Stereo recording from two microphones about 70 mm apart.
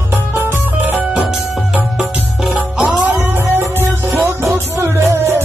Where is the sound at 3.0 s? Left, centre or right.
Right.